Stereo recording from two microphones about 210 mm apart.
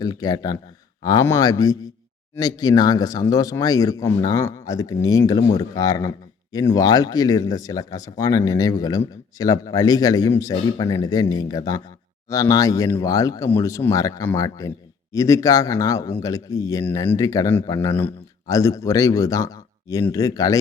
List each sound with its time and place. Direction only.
0.0 s speech: 20° left (ahead or behind)